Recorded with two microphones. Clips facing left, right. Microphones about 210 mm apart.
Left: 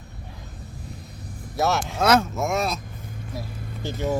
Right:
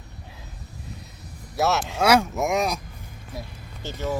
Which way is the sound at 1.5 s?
Centre (ahead or behind).